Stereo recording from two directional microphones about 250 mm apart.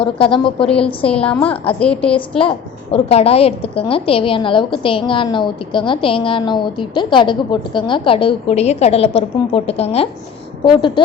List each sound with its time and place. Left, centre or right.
0.0 s a woman's voice: left
0.6 s a woman's voice: centre
2.4 s a woman's voice: left